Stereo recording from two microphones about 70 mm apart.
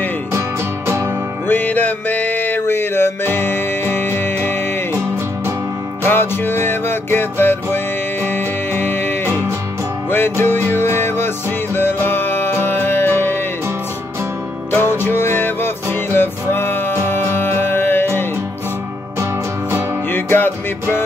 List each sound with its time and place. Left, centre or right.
0.3 s music: right
1.5 s music: left
6.0 s music: left
14.7 s music: left
20.1 s music: left